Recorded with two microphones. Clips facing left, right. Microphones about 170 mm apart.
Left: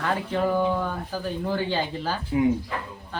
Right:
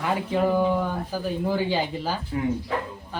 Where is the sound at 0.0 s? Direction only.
10° right (ahead or behind).